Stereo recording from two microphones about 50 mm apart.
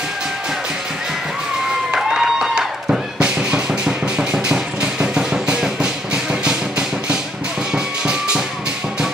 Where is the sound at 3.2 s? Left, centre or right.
Centre.